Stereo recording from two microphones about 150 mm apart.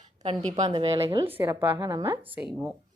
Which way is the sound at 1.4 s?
15° right (ahead or behind).